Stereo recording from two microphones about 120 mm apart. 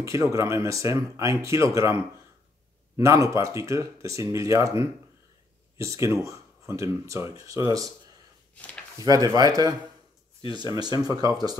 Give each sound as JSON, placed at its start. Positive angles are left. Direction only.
{"t": 0.0, "sound": "speech", "side_deg": -25}
{"t": 3.0, "sound": "speech", "side_deg": -25}
{"t": 5.8, "sound": "speech", "side_deg": -25}
{"t": 8.5, "sound": "speech", "side_deg": 10}
{"t": 9.0, "sound": "speech", "side_deg": -30}